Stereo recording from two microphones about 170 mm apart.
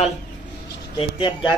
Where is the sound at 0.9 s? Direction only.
35° left (ahead or behind).